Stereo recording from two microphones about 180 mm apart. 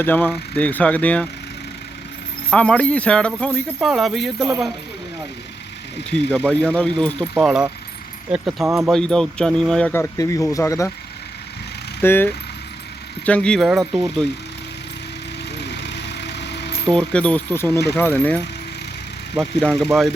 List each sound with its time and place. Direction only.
0.0 s speech: 10° left (ahead or behind)
2.5 s speech: 5° left (ahead or behind)
6.3 s speech: 10° left (ahead or behind)
8.6 s speech: 15° right (ahead or behind)
8.9 s speech: 5° left (ahead or behind)
11.9 s speech: 10° left (ahead or behind)
15.5 s vehicle: 70° left (ahead or behind)
16.9 s speech: 5° left (ahead or behind)
19.4 s speech: 5° left (ahead or behind)